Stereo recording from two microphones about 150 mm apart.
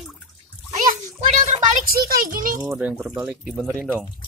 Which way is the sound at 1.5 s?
50° right (ahead or behind).